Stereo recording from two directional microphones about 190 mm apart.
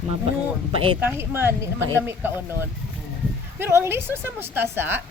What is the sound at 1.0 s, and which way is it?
Speech, 10° right (ahead or behind).